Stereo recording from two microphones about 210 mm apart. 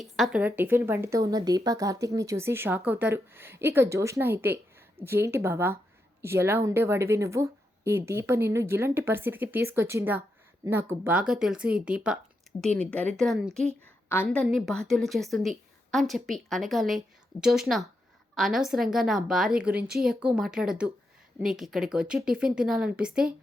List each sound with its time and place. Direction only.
0.0 s a woman's voice: centre (ahead or behind)